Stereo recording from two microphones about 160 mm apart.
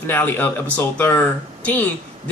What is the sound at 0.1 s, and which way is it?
Speech, 10° left (ahead or behind).